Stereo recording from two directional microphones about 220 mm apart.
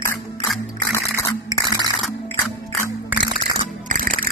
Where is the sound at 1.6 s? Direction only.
20° right (ahead or behind).